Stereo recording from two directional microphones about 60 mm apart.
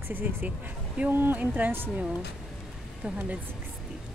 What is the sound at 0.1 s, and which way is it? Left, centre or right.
Speech, right.